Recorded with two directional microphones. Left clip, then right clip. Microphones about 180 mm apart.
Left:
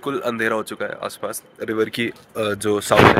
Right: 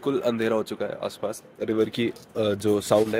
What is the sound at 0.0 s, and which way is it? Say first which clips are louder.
Speech: left 2 dB; centre (ahead or behind).